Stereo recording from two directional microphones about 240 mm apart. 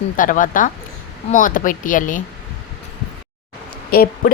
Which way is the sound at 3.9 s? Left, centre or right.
Left.